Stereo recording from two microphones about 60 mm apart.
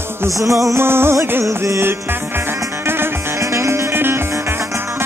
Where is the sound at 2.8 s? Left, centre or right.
Right.